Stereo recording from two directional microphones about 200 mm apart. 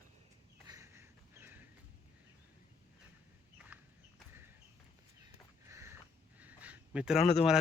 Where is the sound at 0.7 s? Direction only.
15° right (ahead or behind).